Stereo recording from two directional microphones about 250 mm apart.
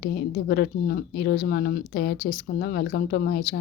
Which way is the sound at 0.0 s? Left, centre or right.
Left.